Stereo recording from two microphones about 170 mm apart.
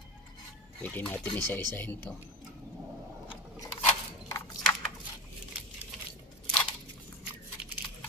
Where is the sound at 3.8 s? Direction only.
15° left (ahead or behind).